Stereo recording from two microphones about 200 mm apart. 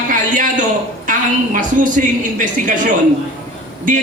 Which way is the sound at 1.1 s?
40° right (ahead or behind).